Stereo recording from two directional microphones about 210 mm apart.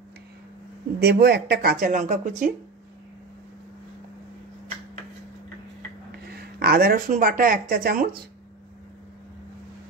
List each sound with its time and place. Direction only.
0.9 s speech: 50° right (ahead or behind)
6.3 s speech: 50° right (ahead or behind)